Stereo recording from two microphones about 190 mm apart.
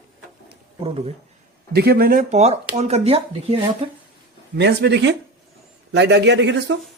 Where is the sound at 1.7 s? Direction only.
55° right (ahead or behind); by 3.8 s 30° right (ahead or behind).